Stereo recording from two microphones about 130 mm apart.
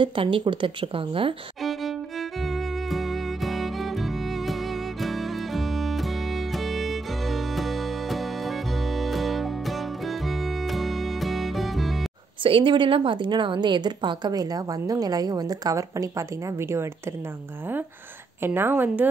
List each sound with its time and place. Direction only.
0.0 s a woman's voice: 40° right (ahead or behind)
1.6 s music: centre (ahead or behind)
12.4 s a woman's voice: 40° right (ahead or behind); by 16.9 s 20° right (ahead or behind)
18.4 s a woman's voice: 15° right (ahead or behind)